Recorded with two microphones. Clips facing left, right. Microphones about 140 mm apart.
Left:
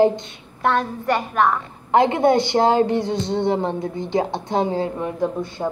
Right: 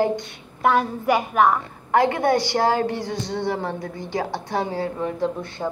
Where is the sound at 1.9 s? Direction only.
20° left (ahead or behind).